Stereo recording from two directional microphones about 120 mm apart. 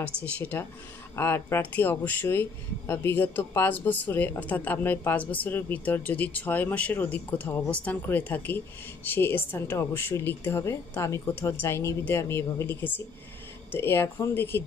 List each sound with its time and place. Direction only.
0.2 s speech: 15° left (ahead or behind)